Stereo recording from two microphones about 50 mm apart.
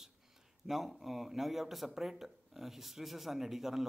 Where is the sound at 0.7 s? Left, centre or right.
Centre.